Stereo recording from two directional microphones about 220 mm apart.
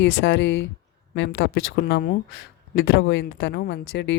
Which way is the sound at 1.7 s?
45° left (ahead or behind).